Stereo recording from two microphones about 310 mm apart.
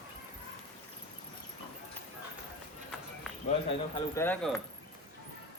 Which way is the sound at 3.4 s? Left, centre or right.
Centre.